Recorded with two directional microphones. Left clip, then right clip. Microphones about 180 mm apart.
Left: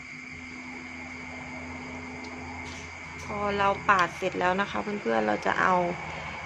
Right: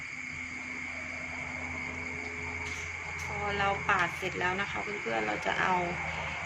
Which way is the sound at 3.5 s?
60° left (ahead or behind).